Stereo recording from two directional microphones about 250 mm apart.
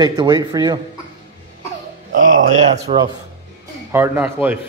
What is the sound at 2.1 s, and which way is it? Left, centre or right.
Speech, right.